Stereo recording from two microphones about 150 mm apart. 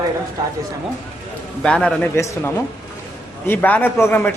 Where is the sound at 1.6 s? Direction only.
5° left (ahead or behind).